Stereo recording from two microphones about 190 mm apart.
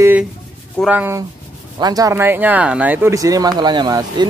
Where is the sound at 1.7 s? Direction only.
20° right (ahead or behind).